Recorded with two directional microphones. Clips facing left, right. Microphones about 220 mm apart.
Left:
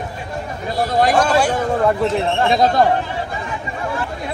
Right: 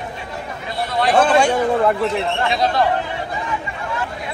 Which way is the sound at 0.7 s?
45° left (ahead or behind).